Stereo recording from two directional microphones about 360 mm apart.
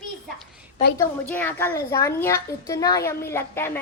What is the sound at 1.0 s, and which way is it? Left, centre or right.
A woman's voice, centre.